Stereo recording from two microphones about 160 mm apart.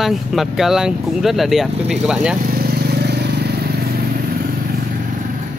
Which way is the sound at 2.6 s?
80° right.